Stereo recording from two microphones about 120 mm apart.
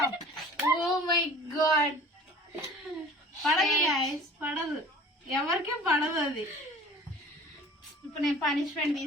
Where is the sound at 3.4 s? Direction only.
Centre (ahead or behind).